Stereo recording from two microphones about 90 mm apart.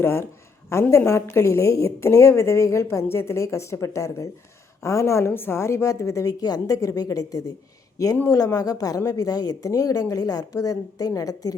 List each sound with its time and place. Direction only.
0.0 s a woman's voice: 25° left (ahead or behind)